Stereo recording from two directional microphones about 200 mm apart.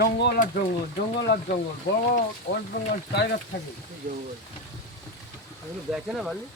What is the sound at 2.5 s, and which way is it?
Speech, 50° left (ahead or behind).